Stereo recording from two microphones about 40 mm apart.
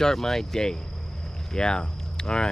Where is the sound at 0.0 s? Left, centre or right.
Centre.